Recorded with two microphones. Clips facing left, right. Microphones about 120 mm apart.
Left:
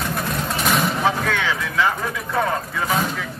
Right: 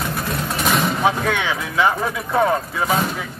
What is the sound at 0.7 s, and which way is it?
Vehicle, centre (ahead or behind).